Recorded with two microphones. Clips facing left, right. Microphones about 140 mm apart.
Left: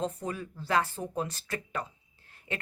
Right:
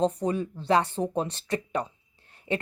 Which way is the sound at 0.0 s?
30° right (ahead or behind).